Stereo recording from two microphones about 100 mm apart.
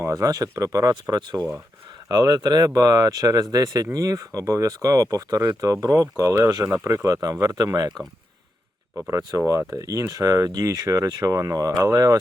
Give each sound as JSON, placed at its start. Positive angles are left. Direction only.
{"t": 0.0, "sound": "speech", "side_deg": -35}
{"t": 9.0, "sound": "speech", "side_deg": -25}